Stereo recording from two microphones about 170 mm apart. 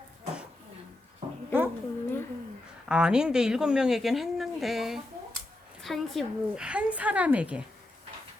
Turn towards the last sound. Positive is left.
turn(degrees=-5)  # may be behind; listen again after turning